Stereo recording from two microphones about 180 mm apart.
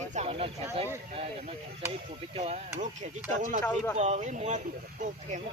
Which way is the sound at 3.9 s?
40° right (ahead or behind).